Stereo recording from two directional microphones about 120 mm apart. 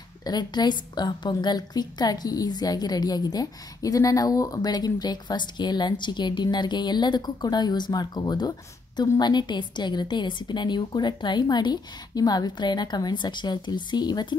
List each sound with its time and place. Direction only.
0.2 s a woman's voice: 35° left (ahead or behind)